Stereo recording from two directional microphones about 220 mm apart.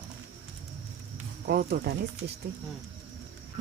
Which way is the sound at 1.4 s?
45° right (ahead or behind).